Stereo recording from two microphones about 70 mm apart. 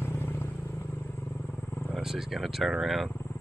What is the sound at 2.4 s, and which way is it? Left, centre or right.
Speech, centre.